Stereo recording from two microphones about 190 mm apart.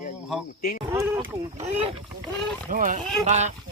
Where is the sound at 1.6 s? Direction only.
35° right (ahead or behind).